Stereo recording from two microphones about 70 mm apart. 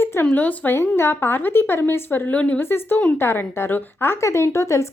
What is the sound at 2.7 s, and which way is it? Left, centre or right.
Speech, left.